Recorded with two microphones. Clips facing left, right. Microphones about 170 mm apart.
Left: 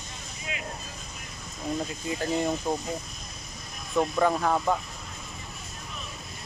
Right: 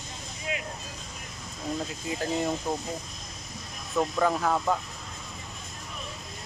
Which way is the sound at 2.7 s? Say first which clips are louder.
Left 2 dB; 10° left (ahead or behind).